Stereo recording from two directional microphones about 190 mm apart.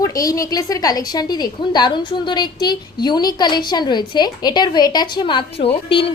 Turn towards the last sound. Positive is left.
turn(degrees=30)  # may be behind; listen again after turning